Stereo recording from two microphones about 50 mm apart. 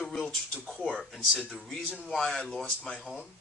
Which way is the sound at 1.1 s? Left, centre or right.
Centre.